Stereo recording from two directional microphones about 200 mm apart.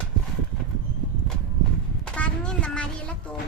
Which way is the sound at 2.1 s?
5° left (ahead or behind).